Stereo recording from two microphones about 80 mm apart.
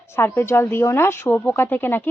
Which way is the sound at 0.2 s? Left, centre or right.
Left.